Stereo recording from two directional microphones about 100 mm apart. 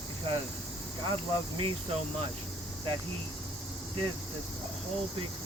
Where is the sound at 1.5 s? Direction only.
80° right.